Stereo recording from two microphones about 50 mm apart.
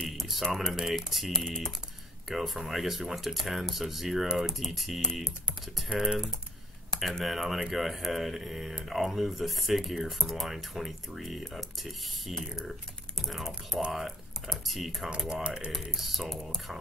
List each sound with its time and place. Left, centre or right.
0.2 s speech: centre
1.3 s speech: centre
2.2 s speech: centre
5.2 s typing: centre
5.9 s speech: centre
6.9 s speech: centre
15.0 s speech: centre
15.9 s speech: centre